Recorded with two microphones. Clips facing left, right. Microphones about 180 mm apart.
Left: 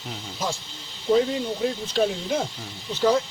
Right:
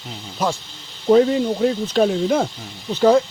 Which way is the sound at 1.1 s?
75° right (ahead or behind).